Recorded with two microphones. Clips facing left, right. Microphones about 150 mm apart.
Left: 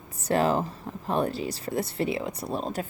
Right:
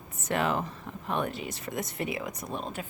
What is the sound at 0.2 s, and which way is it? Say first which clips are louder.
A woman's voice: left 5 dB; 35° left (ahead or behind).